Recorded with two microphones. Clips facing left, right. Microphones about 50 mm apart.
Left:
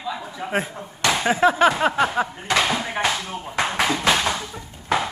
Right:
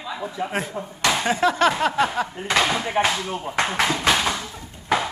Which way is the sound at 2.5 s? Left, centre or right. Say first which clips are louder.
Right 1 dB; centre.